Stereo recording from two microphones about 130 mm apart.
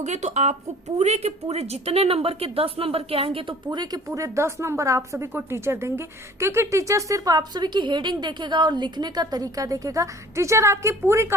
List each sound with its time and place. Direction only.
0.0 s a woman's voice: 60° right (ahead or behind); by 11.3 s 20° right (ahead or behind)